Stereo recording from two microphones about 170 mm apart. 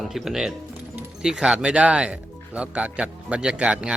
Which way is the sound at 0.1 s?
5° right (ahead or behind).